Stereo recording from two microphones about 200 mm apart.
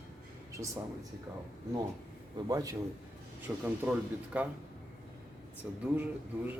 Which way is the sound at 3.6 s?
5° right (ahead or behind).